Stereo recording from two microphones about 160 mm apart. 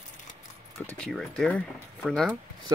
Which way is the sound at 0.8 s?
5° left (ahead or behind).